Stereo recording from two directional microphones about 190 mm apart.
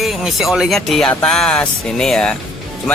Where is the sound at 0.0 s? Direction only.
Centre (ahead or behind).